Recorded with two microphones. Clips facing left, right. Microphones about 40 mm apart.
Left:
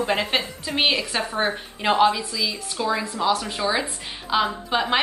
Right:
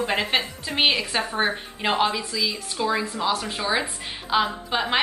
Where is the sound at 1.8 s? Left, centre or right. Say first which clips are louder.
Left 4 dB; right.